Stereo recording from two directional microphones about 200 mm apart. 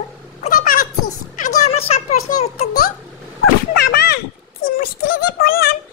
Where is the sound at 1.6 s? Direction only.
30° left (ahead or behind).